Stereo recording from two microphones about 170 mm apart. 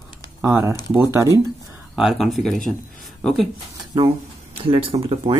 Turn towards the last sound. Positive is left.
turn(degrees=-30)  # may be behind; listen again after turning